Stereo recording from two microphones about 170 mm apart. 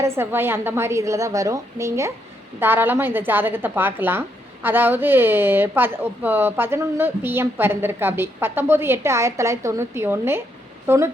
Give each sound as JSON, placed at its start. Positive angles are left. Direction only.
{"t": 0.0, "sound": "speech", "side_deg": -15}